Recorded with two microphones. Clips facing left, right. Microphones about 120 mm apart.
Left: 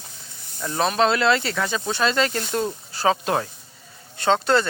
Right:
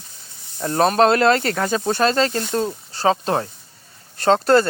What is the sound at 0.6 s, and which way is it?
Speech, 45° right (ahead or behind).